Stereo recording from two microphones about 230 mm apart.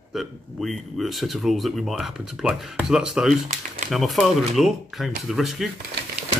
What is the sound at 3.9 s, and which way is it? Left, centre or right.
Speech, centre.